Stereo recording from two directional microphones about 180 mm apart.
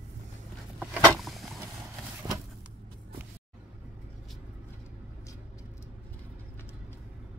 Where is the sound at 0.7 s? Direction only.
Centre (ahead or behind).